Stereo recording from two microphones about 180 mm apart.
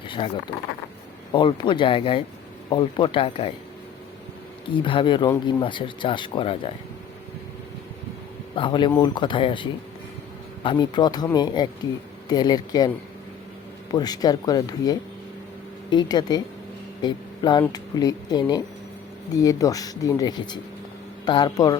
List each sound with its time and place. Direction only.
1.3 s speech: 25° left (ahead or behind)
4.6 s speech: 30° left (ahead or behind)
8.5 s speech: 25° left (ahead or behind)
13.9 s speech: 20° left (ahead or behind)